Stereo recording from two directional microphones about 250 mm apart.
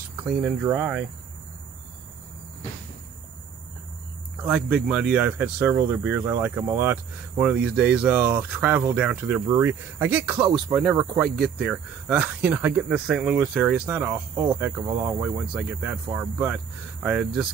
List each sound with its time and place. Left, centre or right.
0.2 s speech: centre
4.4 s speech: centre